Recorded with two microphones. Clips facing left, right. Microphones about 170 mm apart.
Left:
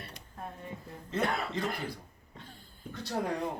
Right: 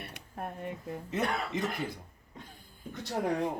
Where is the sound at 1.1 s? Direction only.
20° right (ahead or behind).